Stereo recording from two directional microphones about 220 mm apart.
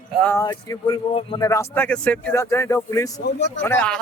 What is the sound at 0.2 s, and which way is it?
Speech, 10° left (ahead or behind).